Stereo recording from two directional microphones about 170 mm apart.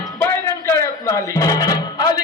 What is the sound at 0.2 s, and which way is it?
Music, 15° left (ahead or behind).